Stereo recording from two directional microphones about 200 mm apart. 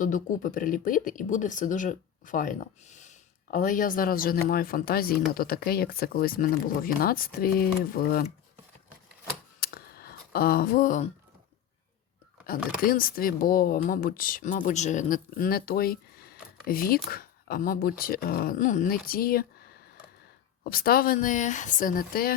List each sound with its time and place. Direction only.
0.0 s speech: 40° left (ahead or behind)
9.6 s a sound: 50° left (ahead or behind)
12.8 s speech: 45° left (ahead or behind)
20.7 s speech: 45° left (ahead or behind)